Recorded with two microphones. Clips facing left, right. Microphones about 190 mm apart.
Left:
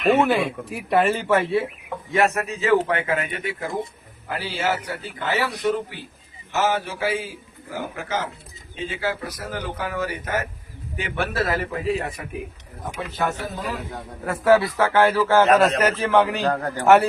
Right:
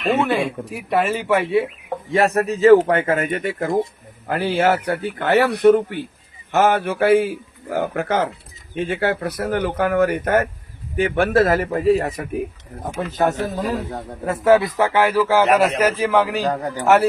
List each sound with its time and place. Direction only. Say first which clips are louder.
0.7 s a man's voice: left 2 dB; centre (ahead or behind)
2.1 s speech: right 4 dB; 35° right (ahead or behind)
14.3 s a man's voice: right 2 dB; 20° right (ahead or behind)
16.8 s a man's voice: even; centre (ahead or behind)